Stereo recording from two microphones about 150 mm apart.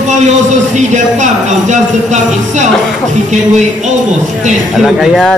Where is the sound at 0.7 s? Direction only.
55° right (ahead or behind).